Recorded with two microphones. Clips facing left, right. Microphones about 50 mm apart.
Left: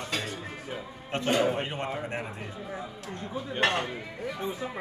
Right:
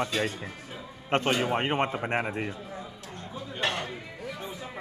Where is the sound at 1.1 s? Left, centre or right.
Right.